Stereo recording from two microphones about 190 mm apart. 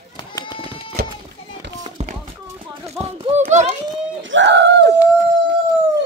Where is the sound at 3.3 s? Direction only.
35° right (ahead or behind).